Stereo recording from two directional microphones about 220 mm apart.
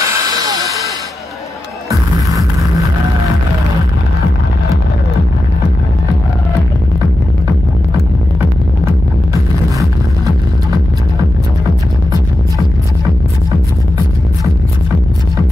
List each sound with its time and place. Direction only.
0.0 s hiss: 15° right (ahead or behind)